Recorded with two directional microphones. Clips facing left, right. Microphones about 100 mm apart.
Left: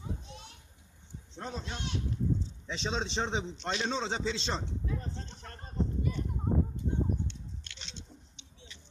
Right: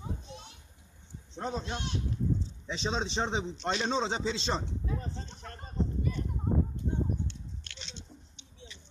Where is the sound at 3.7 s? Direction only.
25° right (ahead or behind).